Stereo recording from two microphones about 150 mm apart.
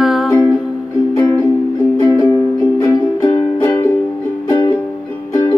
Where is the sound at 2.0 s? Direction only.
25° left (ahead or behind).